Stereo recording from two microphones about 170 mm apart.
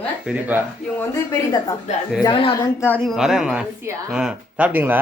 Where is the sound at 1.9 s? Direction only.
45° left (ahead or behind).